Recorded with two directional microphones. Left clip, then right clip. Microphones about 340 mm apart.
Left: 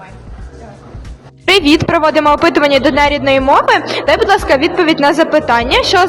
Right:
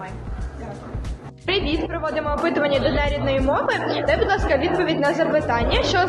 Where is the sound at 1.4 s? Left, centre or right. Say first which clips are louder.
Left 13 dB; left.